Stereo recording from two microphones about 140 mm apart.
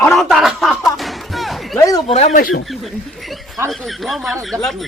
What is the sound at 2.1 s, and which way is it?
Speech, 55° left (ahead or behind).